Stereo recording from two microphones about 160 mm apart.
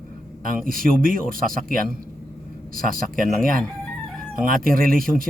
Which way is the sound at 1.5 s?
60° right (ahead or behind).